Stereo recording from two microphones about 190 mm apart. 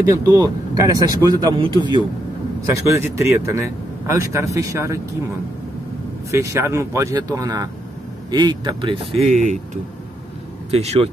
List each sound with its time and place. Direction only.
0.4 s speech: 20° right (ahead or behind)
6.3 s speech: 15° right (ahead or behind)
9.1 s speech: 35° right (ahead or behind)
10.7 s speech: 35° right (ahead or behind)